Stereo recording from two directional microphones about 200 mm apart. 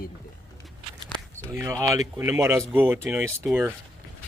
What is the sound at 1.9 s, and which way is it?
Speech, 15° right (ahead or behind).